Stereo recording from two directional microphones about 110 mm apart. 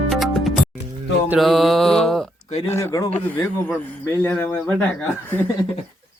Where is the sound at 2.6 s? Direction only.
25° left (ahead or behind).